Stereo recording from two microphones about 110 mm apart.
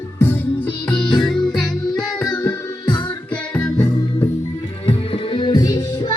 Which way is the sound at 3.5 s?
10° left (ahead or behind).